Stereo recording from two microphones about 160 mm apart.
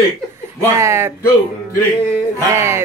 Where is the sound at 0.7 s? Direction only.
15° right (ahead or behind).